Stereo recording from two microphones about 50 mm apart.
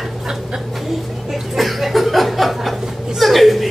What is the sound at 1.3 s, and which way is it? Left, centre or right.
Chuckle, centre.